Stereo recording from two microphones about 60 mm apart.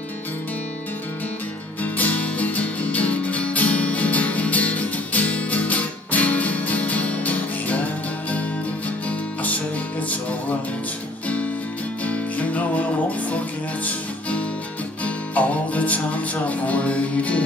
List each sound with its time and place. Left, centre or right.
1.8 s music: left
12.0 s music: left
15.0 s music: left